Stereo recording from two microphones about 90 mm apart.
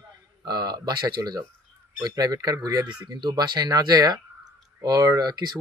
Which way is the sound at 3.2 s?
55° right (ahead or behind).